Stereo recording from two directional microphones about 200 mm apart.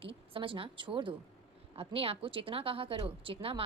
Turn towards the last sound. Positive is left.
turn(degrees=-30)  # may be behind; listen again after turning